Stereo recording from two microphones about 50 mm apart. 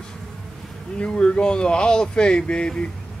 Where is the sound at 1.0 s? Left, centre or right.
Left.